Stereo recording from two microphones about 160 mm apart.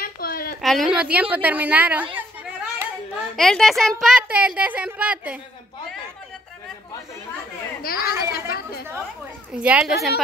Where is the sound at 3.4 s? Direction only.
Centre (ahead or behind).